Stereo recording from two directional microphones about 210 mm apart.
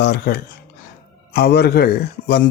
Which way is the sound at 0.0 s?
50° left (ahead or behind).